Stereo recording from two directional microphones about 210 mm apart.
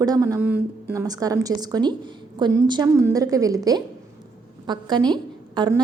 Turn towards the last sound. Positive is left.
turn(degrees=-20)  # may be behind; listen again after turning